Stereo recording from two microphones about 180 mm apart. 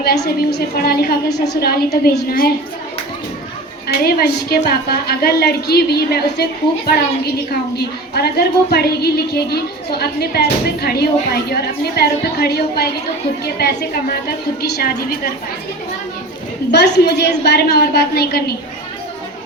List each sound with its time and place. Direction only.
0.0 s a woman's voice: 60° left (ahead or behind)
3.8 s a woman's voice: 60° left (ahead or behind)
16.7 s a woman's voice: 65° left (ahead or behind)